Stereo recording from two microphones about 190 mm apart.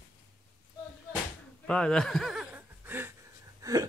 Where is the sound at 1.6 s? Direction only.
5° left (ahead or behind); by 3.8 s 20° right (ahead or behind).